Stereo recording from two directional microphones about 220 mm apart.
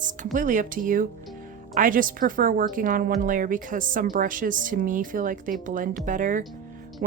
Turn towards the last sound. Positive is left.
turn(degrees=-40)  # may be behind; listen again after turning